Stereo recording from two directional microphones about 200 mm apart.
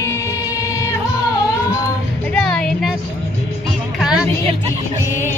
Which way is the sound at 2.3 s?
5° left (ahead or behind).